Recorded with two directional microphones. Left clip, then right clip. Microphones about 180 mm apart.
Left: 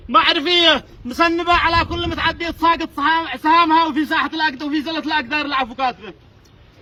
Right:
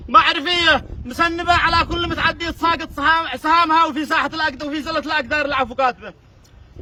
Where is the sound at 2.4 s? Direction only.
15° right (ahead or behind).